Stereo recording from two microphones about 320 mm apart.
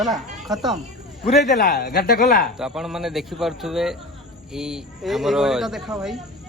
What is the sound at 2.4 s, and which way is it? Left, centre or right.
Speech, centre.